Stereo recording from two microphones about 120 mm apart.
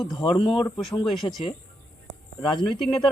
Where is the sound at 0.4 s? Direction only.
Centre (ahead or behind).